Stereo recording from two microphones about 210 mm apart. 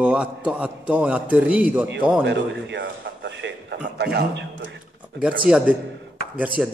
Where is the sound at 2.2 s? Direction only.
55° right (ahead or behind).